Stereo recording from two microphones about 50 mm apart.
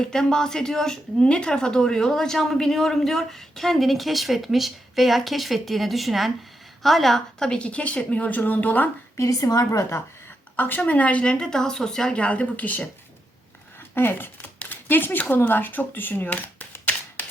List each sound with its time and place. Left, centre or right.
0.0 s speech: centre; by 8.9 s left
9.1 s a woman's voice: left
10.8 s speech: left
13.9 s speech: left